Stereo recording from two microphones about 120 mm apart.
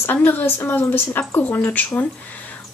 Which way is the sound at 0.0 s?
15° left (ahead or behind).